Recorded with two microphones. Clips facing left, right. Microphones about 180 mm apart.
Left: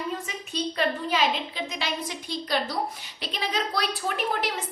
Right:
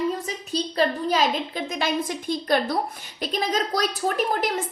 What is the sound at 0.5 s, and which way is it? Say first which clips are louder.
A woman's voice: right 4 dB; 40° right (ahead or behind).